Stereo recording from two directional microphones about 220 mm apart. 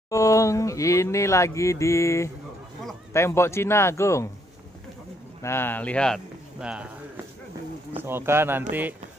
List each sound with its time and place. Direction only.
0.1 s speech: 15° left (ahead or behind)
5.4 s speech: 10° left (ahead or behind)
8.0 s speech: 10° right (ahead or behind)